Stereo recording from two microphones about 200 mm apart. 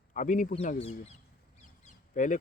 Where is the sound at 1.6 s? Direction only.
35° left (ahead or behind).